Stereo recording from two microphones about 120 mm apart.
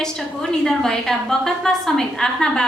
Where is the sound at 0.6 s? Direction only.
5° left (ahead or behind).